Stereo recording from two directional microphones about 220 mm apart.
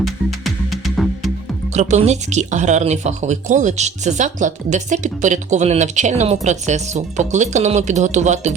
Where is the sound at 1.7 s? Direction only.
30° right (ahead or behind).